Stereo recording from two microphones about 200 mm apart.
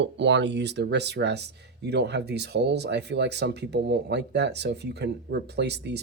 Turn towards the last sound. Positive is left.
turn(degrees=-55)  # may be behind; listen again after turning